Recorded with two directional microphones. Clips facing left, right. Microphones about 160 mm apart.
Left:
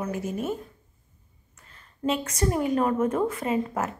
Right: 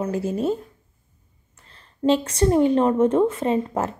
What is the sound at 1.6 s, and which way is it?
A woman's voice, 30° right (ahead or behind).